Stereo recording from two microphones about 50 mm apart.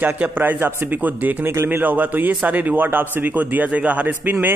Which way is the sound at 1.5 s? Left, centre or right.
Right.